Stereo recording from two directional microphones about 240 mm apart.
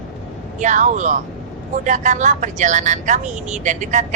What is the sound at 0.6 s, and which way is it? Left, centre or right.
Speech, right.